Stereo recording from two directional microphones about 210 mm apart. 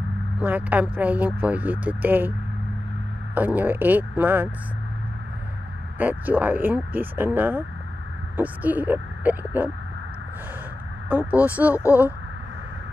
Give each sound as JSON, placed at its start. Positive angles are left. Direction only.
{"t": 0.4, "sound": "speech", "side_deg": -5}
{"t": 3.3, "sound": "speech", "side_deg": -10}
{"t": 5.9, "sound": "speech", "side_deg": -10}
{"t": 11.1, "sound": "speech", "side_deg": -5}
{"t": 11.8, "sound": "speech", "side_deg": 15}